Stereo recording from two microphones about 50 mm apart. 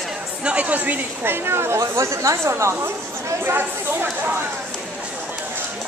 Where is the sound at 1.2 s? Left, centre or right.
Right.